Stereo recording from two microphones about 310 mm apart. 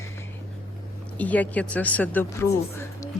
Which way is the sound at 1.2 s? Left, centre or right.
Centre.